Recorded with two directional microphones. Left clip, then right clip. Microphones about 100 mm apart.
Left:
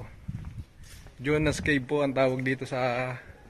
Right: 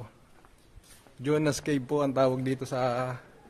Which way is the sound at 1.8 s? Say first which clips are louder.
Right 2 dB; 20° right (ahead or behind).